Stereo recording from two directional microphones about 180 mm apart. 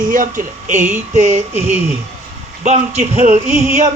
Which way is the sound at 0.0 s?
50° right (ahead or behind).